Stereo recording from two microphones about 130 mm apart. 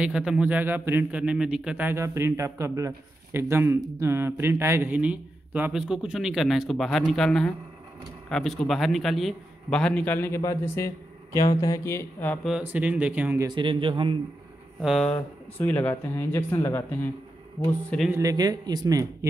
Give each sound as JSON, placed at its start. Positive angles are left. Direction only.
{"t": 0.0, "sound": "a man's voice", "side_deg": -5}
{"t": 12.4, "sound": "a man's voice", "side_deg": -10}
{"t": 13.5, "sound": "a man's voice", "side_deg": -40}
{"t": 14.8, "sound": "a man's voice", "side_deg": -5}
{"t": 15.6, "sound": "speech", "side_deg": 15}
{"t": 17.8, "sound": "a man's voice", "side_deg": 5}
{"t": 18.1, "sound": "a man's voice", "side_deg": -30}